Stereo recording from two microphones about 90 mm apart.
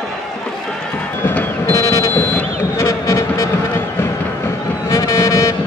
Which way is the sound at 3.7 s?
25° left (ahead or behind).